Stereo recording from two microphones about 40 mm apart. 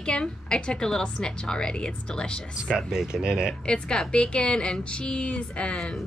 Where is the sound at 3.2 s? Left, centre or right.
Right.